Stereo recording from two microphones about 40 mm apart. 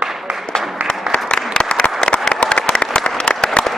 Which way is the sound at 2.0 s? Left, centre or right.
Left.